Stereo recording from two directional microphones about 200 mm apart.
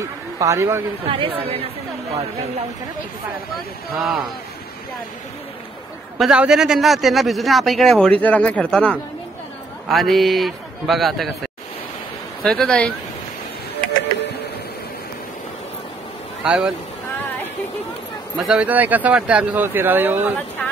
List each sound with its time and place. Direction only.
0.0 s a man's voice: 15° right (ahead or behind)
1.0 s speech: 30° right (ahead or behind)
3.5 s a man's voice: centre (ahead or behind)
6.1 s a man's voice: 5° right (ahead or behind)
12.4 s a man's voice: 5° left (ahead or behind)
16.4 s a man's voice: 5° right (ahead or behind)
18.4 s speech: 5° right (ahead or behind)